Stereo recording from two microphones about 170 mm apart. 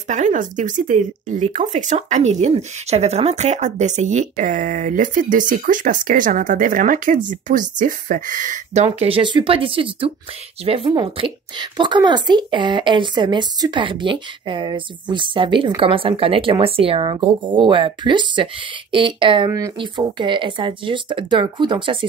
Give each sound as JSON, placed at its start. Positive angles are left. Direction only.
{"t": 0.1, "sound": "a woman's voice", "side_deg": -45}